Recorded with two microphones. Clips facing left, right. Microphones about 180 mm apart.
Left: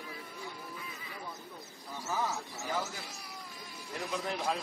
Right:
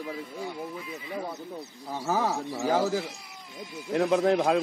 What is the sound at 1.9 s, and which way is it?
Speech, 75° right (ahead or behind).